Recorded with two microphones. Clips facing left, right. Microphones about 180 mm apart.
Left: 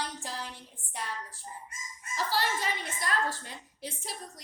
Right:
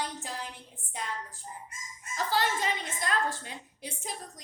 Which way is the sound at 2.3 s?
20° right (ahead or behind).